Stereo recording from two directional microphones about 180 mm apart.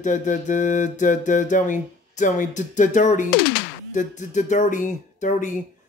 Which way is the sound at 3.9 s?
45° left (ahead or behind).